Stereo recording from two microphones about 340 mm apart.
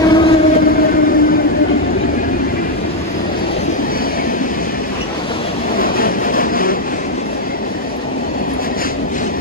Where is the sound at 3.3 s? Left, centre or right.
Left.